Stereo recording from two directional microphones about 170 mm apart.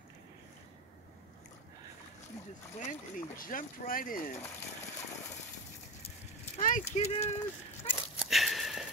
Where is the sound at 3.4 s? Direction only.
55° left (ahead or behind).